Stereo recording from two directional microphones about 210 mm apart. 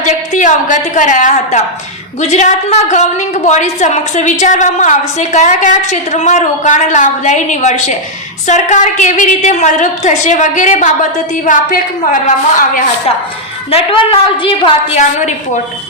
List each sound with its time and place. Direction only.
0.0 s a woman's voice: 35° left (ahead or behind)
13.7 s a woman's voice: 25° left (ahead or behind)